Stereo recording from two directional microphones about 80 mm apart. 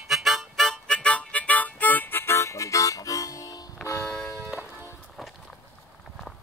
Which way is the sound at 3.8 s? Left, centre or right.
Left.